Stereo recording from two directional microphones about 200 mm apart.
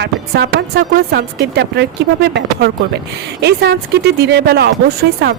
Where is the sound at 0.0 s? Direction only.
55° right (ahead or behind).